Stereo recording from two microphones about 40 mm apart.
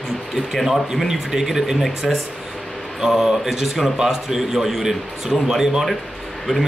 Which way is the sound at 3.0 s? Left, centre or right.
Centre.